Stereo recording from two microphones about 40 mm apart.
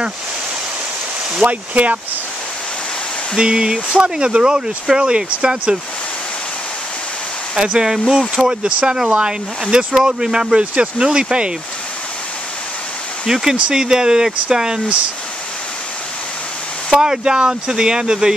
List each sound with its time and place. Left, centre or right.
1.4 s speech: right
3.3 s speech: centre
7.5 s speech: centre
13.3 s speech: centre
16.9 s speech: centre